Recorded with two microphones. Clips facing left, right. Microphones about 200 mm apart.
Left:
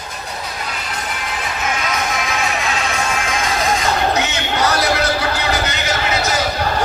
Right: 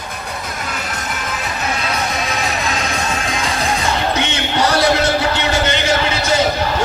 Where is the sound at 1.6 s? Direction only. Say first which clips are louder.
Even; 35° right (ahead or behind).